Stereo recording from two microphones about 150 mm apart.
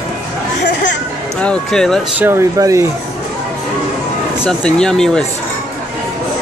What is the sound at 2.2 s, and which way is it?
Speech, 15° right (ahead or behind).